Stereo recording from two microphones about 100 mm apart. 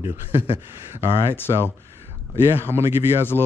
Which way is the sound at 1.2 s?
25° left (ahead or behind).